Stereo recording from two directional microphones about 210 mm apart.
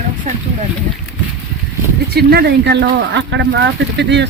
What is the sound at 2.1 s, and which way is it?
Speech, 50° right (ahead or behind).